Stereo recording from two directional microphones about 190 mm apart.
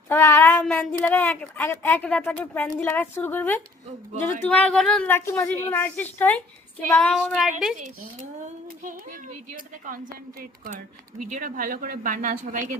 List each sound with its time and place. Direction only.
0.1 s a woman's voice: 15° left (ahead or behind)
6.9 s child singing: 5° left (ahead or behind)
8.4 s speech: 45° right (ahead or behind)